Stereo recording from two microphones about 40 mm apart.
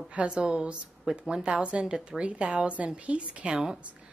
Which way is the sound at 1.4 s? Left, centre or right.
Right.